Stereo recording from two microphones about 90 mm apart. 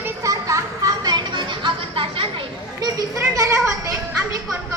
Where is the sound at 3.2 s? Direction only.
35° right (ahead or behind).